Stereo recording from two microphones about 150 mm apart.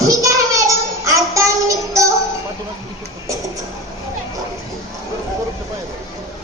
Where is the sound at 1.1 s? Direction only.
20° right (ahead or behind).